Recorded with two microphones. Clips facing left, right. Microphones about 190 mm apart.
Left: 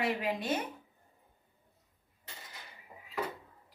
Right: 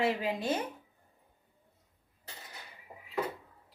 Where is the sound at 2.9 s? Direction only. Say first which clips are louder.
Right 3 dB; 30° right (ahead or behind).